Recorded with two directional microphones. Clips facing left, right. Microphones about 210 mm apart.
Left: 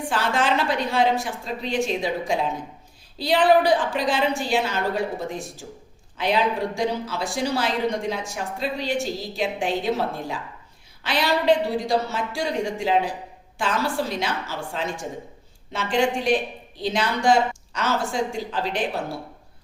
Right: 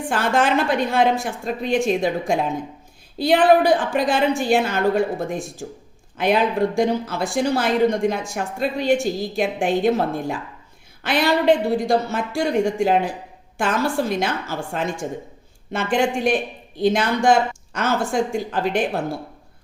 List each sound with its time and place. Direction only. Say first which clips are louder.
0.1 s a woman's voice: right 4 dB; 50° right (ahead or behind)